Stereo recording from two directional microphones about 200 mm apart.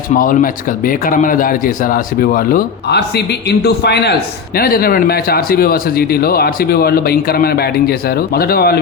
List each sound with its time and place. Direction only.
0.1 s speech: 45° left (ahead or behind)